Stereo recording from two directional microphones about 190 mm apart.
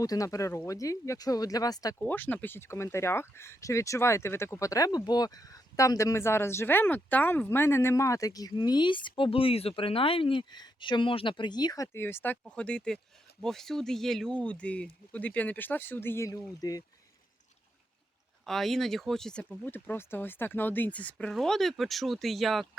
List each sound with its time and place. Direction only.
0.0 s speech: 20° left (ahead or behind)
18.4 s speech: centre (ahead or behind)